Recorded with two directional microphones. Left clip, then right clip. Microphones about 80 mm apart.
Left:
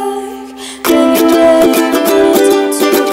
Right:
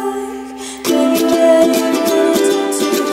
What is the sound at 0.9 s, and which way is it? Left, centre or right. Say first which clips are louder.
Music: left 5 dB; left.